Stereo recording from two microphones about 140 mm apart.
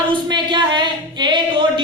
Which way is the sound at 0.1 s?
35° right (ahead or behind).